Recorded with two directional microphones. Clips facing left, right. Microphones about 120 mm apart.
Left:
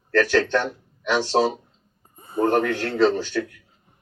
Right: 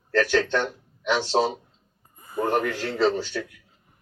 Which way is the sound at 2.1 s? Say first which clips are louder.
Left 4 dB; 25° left (ahead or behind).